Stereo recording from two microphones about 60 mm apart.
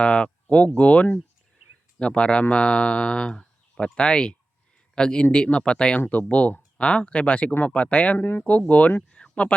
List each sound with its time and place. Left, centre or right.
0.0 s speech: centre
8.2 s speech: left
9.0 s a sound: centre